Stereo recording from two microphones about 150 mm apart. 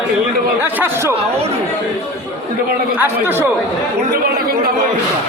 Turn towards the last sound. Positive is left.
turn(degrees=-15)  # may be behind; listen again after turning